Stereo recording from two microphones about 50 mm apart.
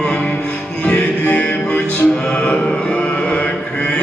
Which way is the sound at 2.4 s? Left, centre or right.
Left.